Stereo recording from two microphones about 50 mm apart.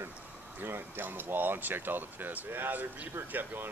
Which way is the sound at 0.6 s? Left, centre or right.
Right.